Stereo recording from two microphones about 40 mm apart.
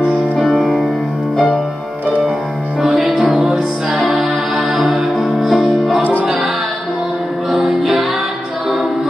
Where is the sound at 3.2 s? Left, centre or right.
Right.